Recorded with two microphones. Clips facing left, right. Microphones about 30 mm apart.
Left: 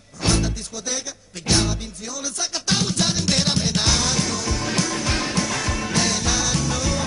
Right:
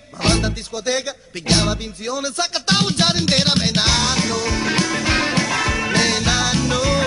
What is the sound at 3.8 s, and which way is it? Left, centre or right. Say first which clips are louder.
Music: right 3 dB; right.